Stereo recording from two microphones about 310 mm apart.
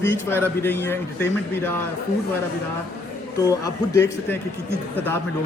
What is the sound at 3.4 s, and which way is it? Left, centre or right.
Speech, centre.